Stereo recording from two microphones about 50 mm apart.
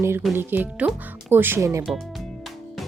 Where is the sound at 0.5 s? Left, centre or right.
Right.